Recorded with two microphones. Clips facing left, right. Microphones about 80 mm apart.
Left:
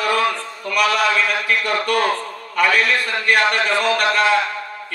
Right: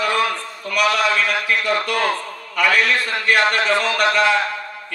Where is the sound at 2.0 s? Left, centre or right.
Left.